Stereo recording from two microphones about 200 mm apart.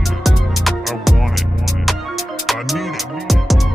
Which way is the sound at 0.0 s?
Centre (ahead or behind).